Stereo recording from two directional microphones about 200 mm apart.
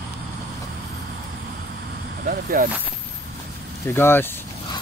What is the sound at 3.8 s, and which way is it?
Speech, 10° left (ahead or behind).